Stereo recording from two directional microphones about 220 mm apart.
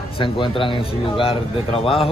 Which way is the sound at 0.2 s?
25° left (ahead or behind).